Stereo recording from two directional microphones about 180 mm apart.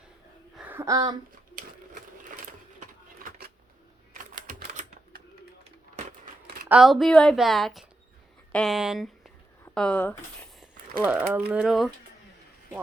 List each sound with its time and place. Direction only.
0.5 s a sound: 10° right (ahead or behind)
1.5 s sewing machine: 50° right (ahead or behind)
4.1 s typewriter: 45° right (ahead or behind)
6.7 s a woman's voice: centre (ahead or behind)
11.0 s speech: 10° right (ahead or behind)